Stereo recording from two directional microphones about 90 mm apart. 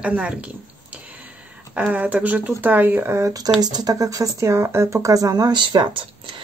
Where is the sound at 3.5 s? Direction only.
50° right (ahead or behind).